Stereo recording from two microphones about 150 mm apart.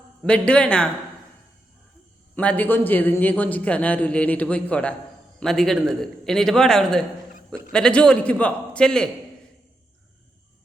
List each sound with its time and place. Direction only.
0.3 s a man's voice: 5° left (ahead or behind)
2.3 s a man's voice: 10° left (ahead or behind)